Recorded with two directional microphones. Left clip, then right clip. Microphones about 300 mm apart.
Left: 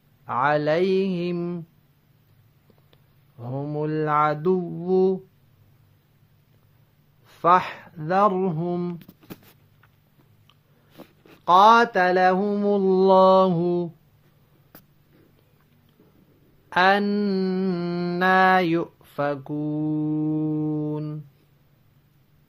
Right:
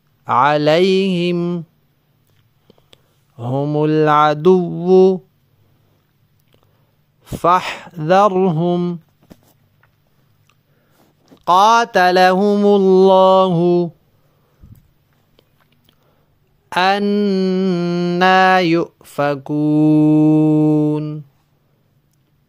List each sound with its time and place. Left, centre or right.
0.2 s mantra: right
2.7 s speech: right
7.4 s mantra: right
11.4 s mantra: right
16.6 s mantra: right